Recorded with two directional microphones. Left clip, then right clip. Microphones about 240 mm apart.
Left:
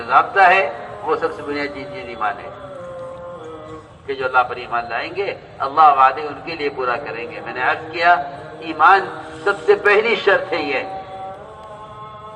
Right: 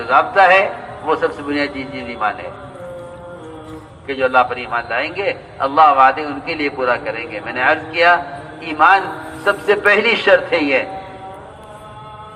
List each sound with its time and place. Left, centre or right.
0.0 s a man's voice: right
4.0 s a man's voice: right